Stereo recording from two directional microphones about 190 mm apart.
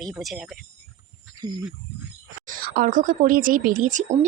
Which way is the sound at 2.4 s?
50° right (ahead or behind).